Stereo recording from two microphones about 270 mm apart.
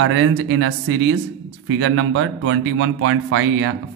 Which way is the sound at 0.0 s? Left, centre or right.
Right.